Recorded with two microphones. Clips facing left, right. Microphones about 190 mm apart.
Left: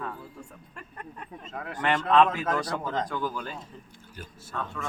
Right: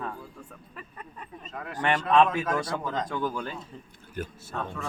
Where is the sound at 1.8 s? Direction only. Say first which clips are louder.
Even; 25° right (ahead or behind).